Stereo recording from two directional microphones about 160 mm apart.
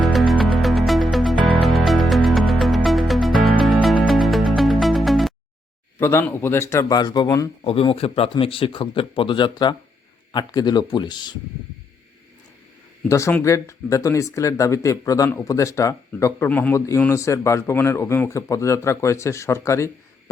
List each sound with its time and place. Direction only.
0.0 s music: centre (ahead or behind)
6.0 s speech: 15° left (ahead or behind)
7.6 s a man's voice: 35° left (ahead or behind)
13.1 s speech: 20° left (ahead or behind)